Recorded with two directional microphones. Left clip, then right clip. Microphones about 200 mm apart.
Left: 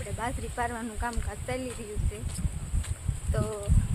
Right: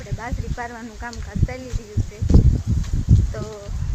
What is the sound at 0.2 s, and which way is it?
Speech, centre (ahead or behind).